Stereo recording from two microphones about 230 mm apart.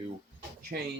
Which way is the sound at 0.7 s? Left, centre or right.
Right.